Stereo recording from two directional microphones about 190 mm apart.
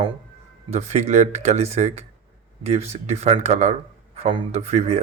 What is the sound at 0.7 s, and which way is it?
Speech, 35° right (ahead or behind).